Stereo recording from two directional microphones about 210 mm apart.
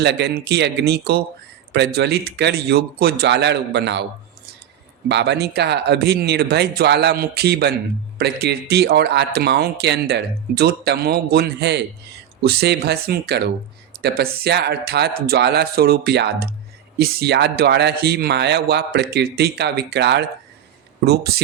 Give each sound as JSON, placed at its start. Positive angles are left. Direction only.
{"t": 0.0, "sound": "speech", "side_deg": -55}
{"t": 5.0, "sound": "speech", "side_deg": -55}